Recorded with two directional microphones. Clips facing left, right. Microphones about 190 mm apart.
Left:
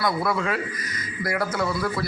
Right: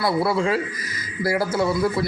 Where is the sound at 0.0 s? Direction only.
30° right (ahead or behind).